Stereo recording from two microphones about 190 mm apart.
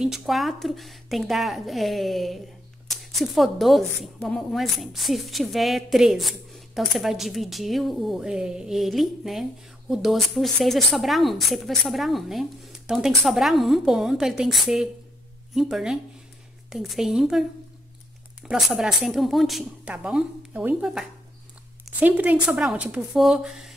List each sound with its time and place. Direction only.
0.0 s speech: centre (ahead or behind)
18.5 s speech: 5° right (ahead or behind)